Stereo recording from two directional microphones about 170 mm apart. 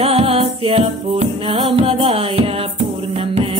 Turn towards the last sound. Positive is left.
turn(degrees=-35)  # may be behind; listen again after turning